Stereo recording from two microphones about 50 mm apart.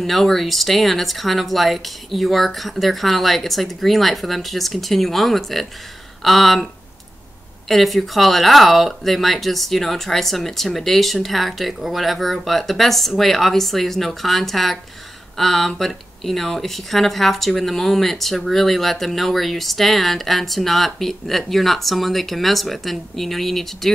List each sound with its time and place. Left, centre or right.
0.0 s speech: centre